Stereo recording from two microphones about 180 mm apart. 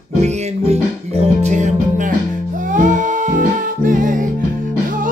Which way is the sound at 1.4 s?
40° right (ahead or behind).